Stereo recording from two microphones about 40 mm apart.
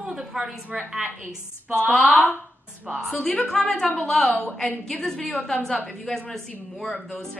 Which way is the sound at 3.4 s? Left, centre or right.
Centre.